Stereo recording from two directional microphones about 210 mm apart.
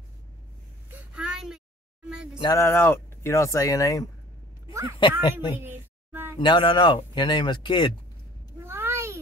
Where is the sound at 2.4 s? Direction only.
15° left (ahead or behind).